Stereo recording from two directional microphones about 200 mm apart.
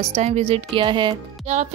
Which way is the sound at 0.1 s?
30° right (ahead or behind).